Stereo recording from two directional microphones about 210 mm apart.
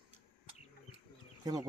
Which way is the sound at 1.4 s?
15° right (ahead or behind).